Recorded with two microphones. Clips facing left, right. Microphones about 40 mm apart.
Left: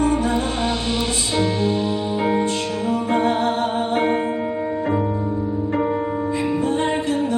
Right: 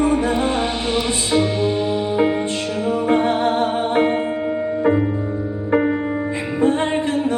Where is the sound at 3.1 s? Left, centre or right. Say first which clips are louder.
Right 2 dB; right.